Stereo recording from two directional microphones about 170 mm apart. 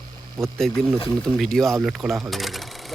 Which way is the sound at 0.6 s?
Centre (ahead or behind).